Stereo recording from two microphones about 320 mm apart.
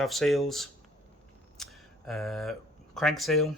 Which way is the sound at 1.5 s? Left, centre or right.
Centre.